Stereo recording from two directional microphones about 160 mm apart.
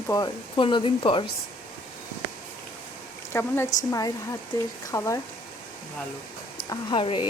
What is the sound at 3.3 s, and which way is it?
Speech, 15° left (ahead or behind).